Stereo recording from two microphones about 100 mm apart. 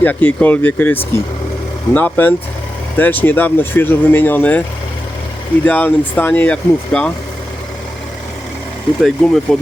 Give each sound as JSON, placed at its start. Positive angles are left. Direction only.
{"t": 0.0, "sound": "speech", "side_deg": 15}
{"t": 5.6, "sound": "speech", "side_deg": 15}
{"t": 9.0, "sound": "speech", "side_deg": 0}